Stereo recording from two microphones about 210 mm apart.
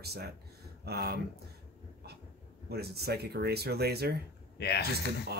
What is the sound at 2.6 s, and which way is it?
Speech, 50° right (ahead or behind).